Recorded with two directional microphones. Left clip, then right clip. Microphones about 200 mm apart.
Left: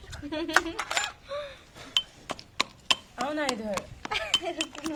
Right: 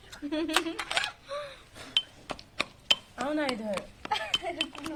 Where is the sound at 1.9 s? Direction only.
45° left (ahead or behind).